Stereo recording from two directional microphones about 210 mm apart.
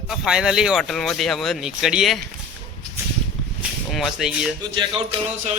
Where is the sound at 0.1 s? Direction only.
5° right (ahead or behind).